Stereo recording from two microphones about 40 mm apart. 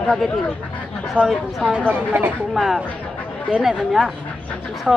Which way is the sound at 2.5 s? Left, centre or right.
Centre.